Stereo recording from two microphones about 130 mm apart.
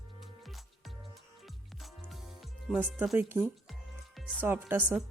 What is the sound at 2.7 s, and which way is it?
Speech, 5° right (ahead or behind).